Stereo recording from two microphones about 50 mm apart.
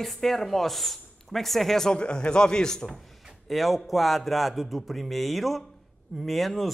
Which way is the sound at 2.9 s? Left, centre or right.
Centre.